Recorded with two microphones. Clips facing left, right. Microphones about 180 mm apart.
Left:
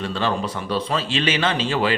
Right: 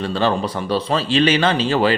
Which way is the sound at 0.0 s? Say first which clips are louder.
Right 4 dB; 35° right (ahead or behind).